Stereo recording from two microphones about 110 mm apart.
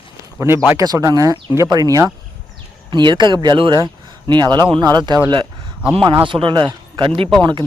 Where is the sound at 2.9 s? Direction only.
45° right (ahead or behind).